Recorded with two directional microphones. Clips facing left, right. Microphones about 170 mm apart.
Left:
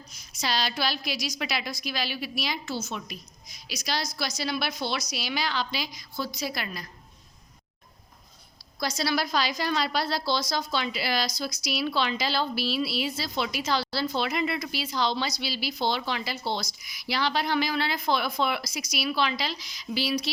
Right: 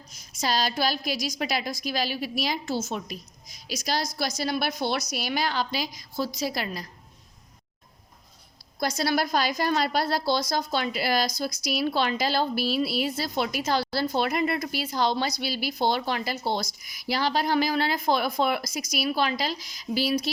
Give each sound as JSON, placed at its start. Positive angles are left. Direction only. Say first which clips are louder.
{"t": 0.1, "sound": "a woman's voice", "louder": "right 3 dB", "side_deg": -45}
{"t": 8.8, "sound": "a woman's voice", "louder": "right 2 dB", "side_deg": -55}